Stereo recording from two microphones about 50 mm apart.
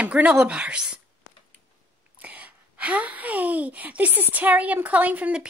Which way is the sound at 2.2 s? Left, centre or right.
Right.